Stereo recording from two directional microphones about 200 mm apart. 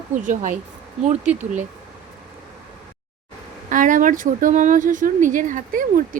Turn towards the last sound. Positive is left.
turn(degrees=-40)  # may be behind; listen again after turning